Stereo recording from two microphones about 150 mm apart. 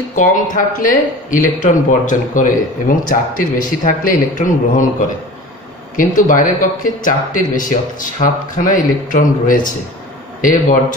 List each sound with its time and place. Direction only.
0.1 s speech: 60° left (ahead or behind)
5.9 s speech: 60° left (ahead or behind)